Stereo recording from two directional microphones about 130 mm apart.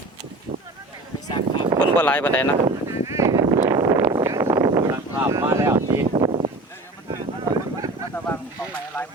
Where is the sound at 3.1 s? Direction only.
25° right (ahead or behind).